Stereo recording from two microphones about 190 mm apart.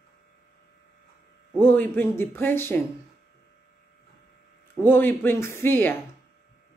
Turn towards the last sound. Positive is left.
turn(degrees=10)  # may be behind; listen again after turning